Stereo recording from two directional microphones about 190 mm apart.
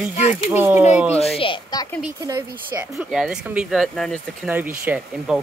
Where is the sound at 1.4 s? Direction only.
25° left (ahead or behind).